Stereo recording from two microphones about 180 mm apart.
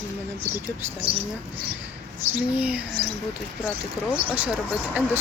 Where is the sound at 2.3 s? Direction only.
10° right (ahead or behind).